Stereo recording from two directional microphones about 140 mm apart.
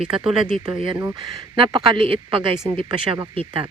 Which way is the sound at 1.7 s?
35° right (ahead or behind).